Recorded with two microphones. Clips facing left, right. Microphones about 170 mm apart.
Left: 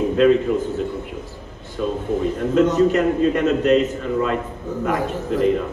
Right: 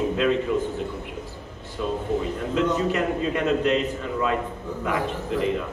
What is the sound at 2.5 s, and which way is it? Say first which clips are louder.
A man's voice: left 7 dB; 45° left (ahead or behind).